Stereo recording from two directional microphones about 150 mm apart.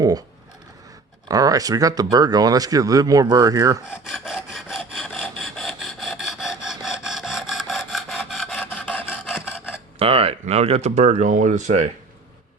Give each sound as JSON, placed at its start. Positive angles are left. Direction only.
{"t": 1.3, "sound": "speech", "side_deg": -25}
{"t": 4.1, "sound": "rub", "side_deg": 0}
{"t": 8.6, "sound": "filing", "side_deg": 10}
{"t": 9.2, "sound": "rub", "side_deg": -5}
{"t": 10.0, "sound": "speech", "side_deg": -40}